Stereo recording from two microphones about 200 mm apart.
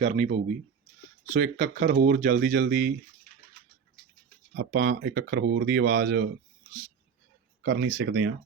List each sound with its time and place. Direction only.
0.0 s speech: 35° right (ahead or behind)
1.3 s speech: 40° right (ahead or behind)
4.5 s speech: 50° right (ahead or behind)
7.6 s speech: 60° right (ahead or behind)